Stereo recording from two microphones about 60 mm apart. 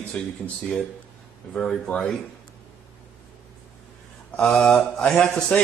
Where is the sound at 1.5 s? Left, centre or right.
Centre.